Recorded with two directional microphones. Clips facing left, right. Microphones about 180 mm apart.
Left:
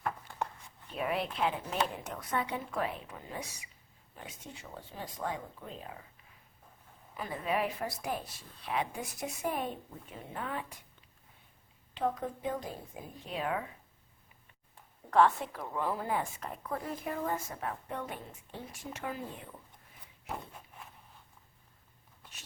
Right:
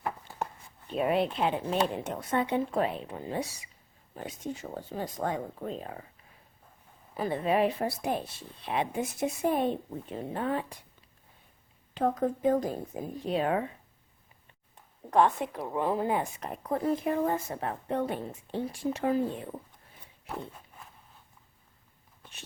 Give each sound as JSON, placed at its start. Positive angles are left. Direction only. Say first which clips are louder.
{"t": 0.9, "sound": "speech", "louder": "right 6 dB", "side_deg": -25}
{"t": 4.1, "sound": "speech", "louder": "right 11 dB", "side_deg": -40}
{"t": 7.1, "sound": "speech", "louder": "right 7 dB", "side_deg": -30}
{"t": 11.9, "sound": "speech", "louder": "right 6 dB", "side_deg": -45}
{"t": 15.1, "sound": "speech", "louder": "right 2 dB", "side_deg": -20}